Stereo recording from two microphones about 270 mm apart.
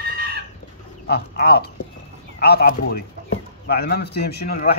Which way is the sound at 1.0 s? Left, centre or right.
Left.